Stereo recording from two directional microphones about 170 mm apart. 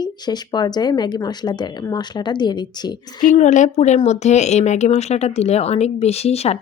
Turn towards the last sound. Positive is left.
turn(degrees=40)  # may be behind; listen again after turning